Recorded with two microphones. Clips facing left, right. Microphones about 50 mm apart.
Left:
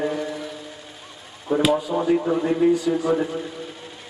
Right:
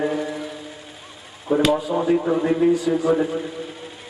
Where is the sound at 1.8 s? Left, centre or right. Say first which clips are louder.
Right 1 dB; centre.